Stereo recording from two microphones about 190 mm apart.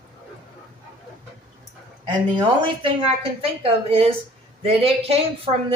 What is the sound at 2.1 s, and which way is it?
A woman's voice, 20° right (ahead or behind).